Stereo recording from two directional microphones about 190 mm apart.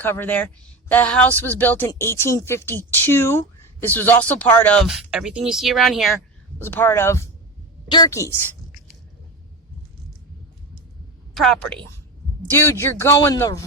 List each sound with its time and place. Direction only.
0.0 s speech: 10° left (ahead or behind)
6.6 s a woman's voice: 10° left (ahead or behind)
11.3 s a woman's voice: centre (ahead or behind); by 13.7 s 15° left (ahead or behind)